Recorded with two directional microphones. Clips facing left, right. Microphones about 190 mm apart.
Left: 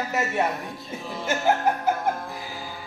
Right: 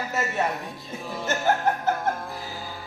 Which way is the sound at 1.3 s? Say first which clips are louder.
Left 1 dB; 10° left (ahead or behind).